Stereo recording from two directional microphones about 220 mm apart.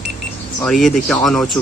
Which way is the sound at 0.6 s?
Centre (ahead or behind).